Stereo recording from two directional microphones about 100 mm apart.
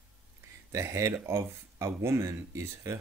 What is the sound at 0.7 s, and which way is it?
Speech, 30° right (ahead or behind).